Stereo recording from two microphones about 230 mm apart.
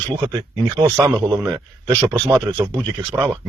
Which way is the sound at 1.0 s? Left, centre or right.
Centre.